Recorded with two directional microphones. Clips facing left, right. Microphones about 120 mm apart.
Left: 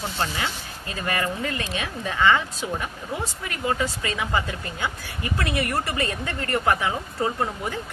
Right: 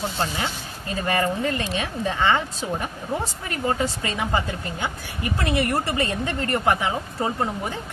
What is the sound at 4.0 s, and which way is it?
A woman's voice, 25° right (ahead or behind).